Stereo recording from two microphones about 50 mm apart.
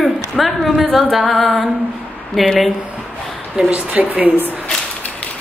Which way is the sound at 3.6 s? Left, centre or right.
Right.